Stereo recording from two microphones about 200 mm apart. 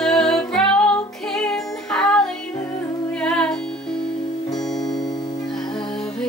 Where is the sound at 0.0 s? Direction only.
Centre (ahead or behind).